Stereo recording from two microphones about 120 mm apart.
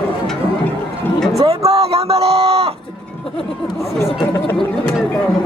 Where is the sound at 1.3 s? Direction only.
60° right (ahead or behind).